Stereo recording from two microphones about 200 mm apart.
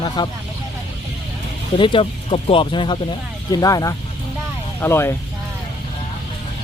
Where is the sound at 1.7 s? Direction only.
25° left (ahead or behind).